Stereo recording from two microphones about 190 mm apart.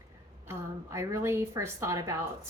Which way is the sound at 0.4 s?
15° right (ahead or behind).